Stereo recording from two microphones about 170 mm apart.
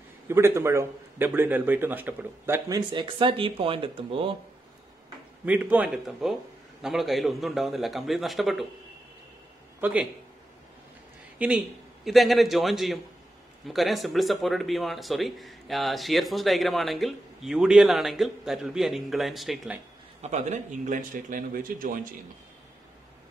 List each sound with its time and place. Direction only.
0.3 s a man's voice: 15° right (ahead or behind)
2.9 s speech: 30° right (ahead or behind)
5.4 s a man's voice: 10° right (ahead or behind)
9.8 s a man's voice: 10° right (ahead or behind)
11.3 s speech: 5° right (ahead or behind)
20.2 s a man's voice: 45° right (ahead or behind)